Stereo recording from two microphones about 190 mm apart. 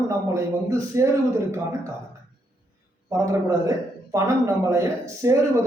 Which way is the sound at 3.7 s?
15° right (ahead or behind).